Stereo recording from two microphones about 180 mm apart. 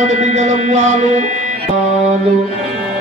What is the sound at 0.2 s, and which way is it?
Speech, 40° right (ahead or behind).